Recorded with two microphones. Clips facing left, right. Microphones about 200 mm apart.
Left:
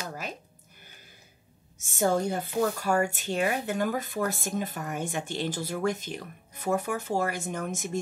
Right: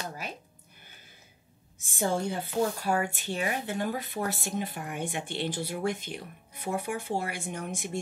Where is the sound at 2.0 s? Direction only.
45° left (ahead or behind).